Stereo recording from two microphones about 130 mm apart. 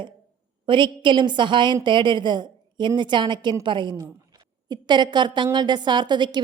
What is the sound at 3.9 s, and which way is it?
A woman's voice, 25° right (ahead or behind).